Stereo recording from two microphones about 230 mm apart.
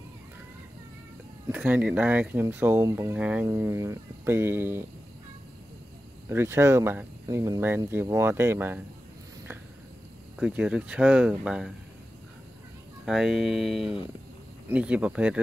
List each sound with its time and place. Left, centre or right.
1.5 s speech: centre
6.2 s speech: centre
10.4 s speech: centre
13.0 s speech: centre